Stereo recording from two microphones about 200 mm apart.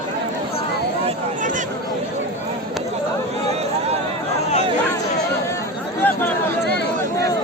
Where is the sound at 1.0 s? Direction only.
40° right (ahead or behind).